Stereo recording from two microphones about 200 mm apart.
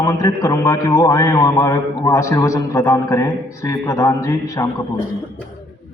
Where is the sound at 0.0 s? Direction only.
15° left (ahead or behind).